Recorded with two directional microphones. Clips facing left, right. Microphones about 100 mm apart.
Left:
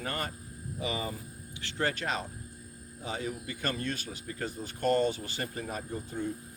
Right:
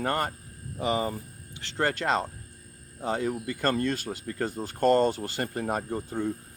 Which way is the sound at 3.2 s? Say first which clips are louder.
Right 7 dB; 60° right (ahead or behind).